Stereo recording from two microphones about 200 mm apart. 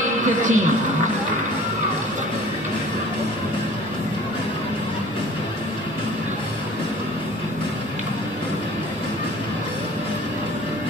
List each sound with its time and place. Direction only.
0.2 s speech: 40° right (ahead or behind)